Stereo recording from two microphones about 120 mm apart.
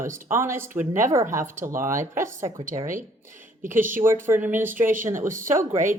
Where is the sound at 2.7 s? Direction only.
45° right (ahead or behind).